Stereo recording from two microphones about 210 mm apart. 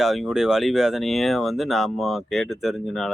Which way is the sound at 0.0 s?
Centre (ahead or behind).